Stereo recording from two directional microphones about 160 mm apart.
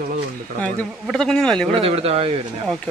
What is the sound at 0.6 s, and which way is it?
Speech, 5° left (ahead or behind).